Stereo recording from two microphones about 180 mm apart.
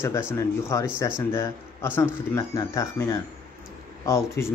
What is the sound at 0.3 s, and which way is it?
A man's voice, 15° left (ahead or behind).